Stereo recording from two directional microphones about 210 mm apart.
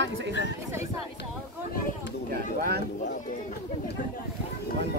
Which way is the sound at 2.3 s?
45° right (ahead or behind).